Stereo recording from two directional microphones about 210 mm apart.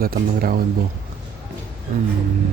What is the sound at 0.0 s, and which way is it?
Speech, 45° right (ahead or behind).